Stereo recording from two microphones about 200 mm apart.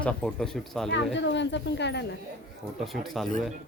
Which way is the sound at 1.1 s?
65° left (ahead or behind).